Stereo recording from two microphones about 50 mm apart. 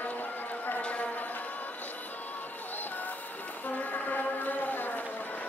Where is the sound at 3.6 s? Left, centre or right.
Left.